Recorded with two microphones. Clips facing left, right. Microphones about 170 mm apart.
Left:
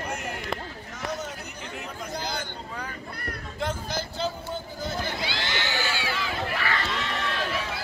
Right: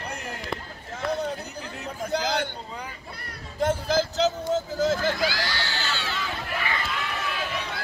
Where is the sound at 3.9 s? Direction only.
90° right.